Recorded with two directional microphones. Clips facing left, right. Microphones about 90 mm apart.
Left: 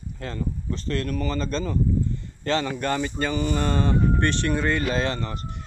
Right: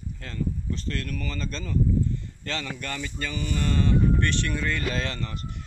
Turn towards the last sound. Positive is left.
turn(degrees=30)  # may be behind; listen again after turning